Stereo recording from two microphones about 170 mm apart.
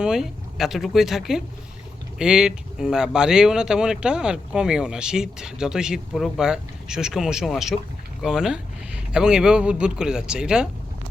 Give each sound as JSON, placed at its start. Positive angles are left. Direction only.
{"t": 0.0, "sound": "speech", "side_deg": -5}